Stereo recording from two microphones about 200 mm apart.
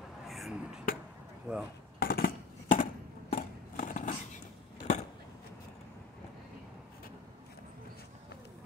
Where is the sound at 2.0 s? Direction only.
50° left (ahead or behind).